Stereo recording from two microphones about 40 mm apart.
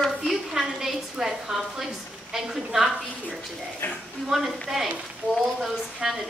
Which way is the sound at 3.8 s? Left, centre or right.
Left.